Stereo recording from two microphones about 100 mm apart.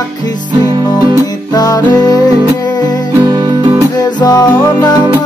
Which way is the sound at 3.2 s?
45° right (ahead or behind).